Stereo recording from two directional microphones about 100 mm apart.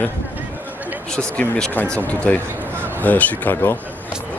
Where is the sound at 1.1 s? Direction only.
10° left (ahead or behind).